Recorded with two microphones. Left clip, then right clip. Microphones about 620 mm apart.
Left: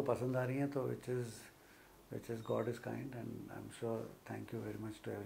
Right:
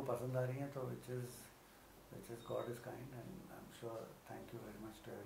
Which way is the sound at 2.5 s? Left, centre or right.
Left.